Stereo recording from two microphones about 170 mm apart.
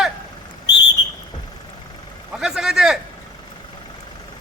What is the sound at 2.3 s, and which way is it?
Speech, 5° right (ahead or behind).